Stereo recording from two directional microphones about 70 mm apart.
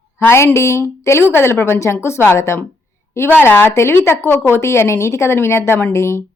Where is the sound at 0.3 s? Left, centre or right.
Left.